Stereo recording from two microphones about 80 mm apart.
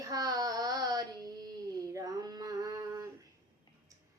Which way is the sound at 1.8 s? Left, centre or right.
Right.